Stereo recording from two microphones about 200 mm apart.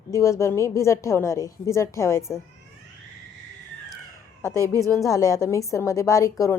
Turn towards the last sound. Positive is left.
turn(degrees=15)  # may be behind; listen again after turning